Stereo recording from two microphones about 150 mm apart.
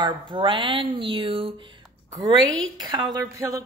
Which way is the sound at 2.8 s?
30° right (ahead or behind).